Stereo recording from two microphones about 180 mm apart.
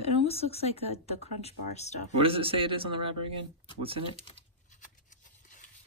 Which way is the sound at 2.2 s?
30° right (ahead or behind).